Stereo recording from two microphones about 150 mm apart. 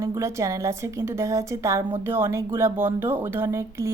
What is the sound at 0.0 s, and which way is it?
A woman's voice, 20° right (ahead or behind).